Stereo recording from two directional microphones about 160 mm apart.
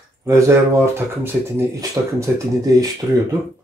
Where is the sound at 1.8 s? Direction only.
20° right (ahead or behind).